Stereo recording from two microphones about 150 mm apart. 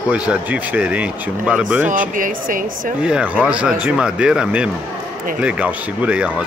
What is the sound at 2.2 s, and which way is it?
Speech, 65° right (ahead or behind).